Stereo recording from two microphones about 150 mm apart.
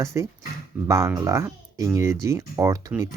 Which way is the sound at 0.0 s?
20° right (ahead or behind).